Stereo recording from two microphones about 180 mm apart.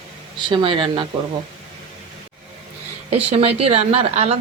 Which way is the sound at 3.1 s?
35° right (ahead or behind).